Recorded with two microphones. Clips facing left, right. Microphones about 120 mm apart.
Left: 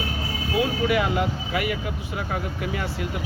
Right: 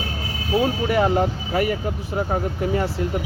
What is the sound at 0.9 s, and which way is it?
Speech, 35° right (ahead or behind).